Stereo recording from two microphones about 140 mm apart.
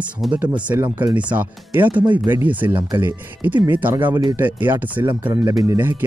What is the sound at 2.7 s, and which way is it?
Speech, 30° right (ahead or behind).